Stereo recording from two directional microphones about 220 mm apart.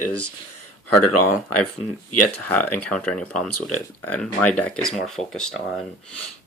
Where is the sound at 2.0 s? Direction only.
90° left.